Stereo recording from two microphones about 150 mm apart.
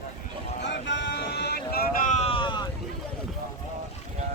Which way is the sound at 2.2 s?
35° left (ahead or behind).